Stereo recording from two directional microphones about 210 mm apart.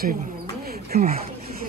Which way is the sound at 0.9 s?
45° right (ahead or behind).